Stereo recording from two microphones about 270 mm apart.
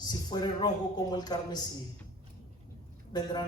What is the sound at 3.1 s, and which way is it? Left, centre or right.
Speech, centre.